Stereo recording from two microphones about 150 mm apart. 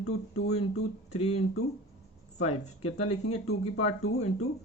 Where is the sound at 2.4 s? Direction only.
45° left (ahead or behind).